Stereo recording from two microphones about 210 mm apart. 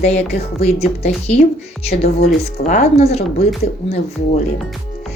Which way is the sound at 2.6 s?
30° left (ahead or behind).